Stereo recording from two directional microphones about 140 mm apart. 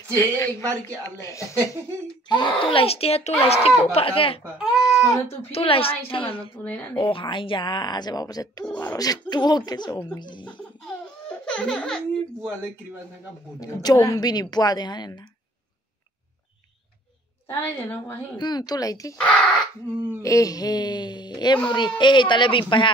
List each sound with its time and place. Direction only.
0.1 s a woman's voice: 15° left (ahead or behind)
2.2 s speech: 35° left (ahead or behind)
4.6 s speech: centre (ahead or behind)
5.5 s speech: 40° left (ahead or behind)
6.5 s a woman's voice: 10° left (ahead or behind)
7.0 s speech: 35° left (ahead or behind)
8.6 s a woman's voice: 15° left (ahead or behind)
8.9 s a woman's voice: 25° left (ahead or behind)
10.6 s baby laughter: 5° left (ahead or behind)
13.6 s a woman's voice: 25° left (ahead or behind)
17.6 s a woman's voice: 15° left (ahead or behind)
18.4 s a woman's voice: 30° left (ahead or behind)
19.1 s a woman's voice: 5° left (ahead or behind)
20.2 s speech: 20° left (ahead or behind)